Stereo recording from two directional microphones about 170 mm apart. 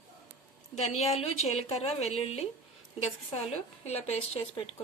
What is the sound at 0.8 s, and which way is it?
A woman's voice, 40° left (ahead or behind).